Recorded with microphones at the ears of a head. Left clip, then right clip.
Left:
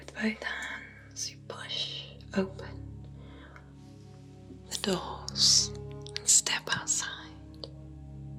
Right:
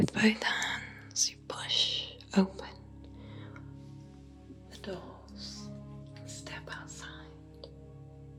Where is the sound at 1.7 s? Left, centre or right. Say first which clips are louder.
Right 6 dB; right.